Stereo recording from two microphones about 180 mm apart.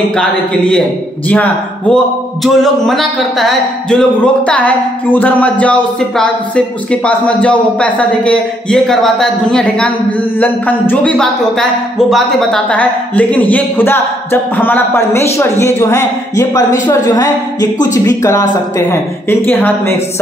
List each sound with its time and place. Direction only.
0.1 s a woman's voice: 5° left (ahead or behind)